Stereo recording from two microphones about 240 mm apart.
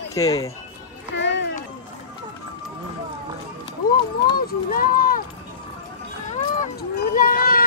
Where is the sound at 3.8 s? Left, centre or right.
Left.